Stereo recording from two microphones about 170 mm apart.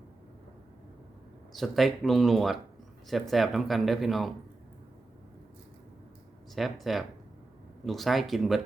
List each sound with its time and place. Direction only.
1.5 s speech: centre (ahead or behind)
6.5 s speech: centre (ahead or behind)